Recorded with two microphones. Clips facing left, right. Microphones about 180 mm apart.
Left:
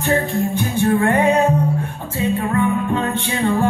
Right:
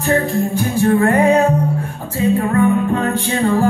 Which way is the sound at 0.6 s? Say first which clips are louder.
Right 3 dB; 35° right (ahead or behind).